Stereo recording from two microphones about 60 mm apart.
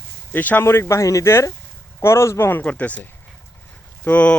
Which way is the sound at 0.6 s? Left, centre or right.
Left.